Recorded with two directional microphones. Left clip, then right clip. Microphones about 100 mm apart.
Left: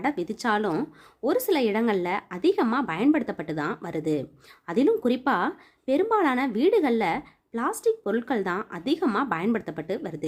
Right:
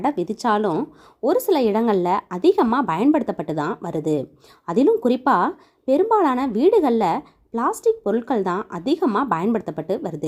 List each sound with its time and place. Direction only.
0.0 s speech: 30° right (ahead or behind)